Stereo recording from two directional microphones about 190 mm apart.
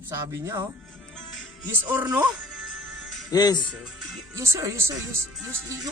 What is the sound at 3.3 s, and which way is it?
Speech, 20° left (ahead or behind).